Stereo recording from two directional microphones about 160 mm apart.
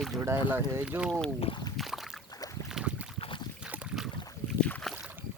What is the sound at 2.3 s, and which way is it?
Boat, 20° left (ahead or behind).